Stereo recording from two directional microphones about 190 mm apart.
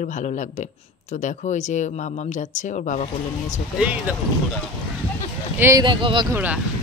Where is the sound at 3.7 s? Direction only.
5° right (ahead or behind).